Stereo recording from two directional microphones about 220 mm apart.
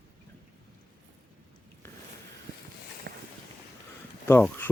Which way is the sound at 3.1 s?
45° right (ahead or behind).